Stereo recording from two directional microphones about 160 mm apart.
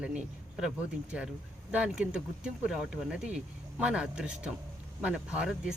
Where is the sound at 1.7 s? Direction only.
5° right (ahead or behind).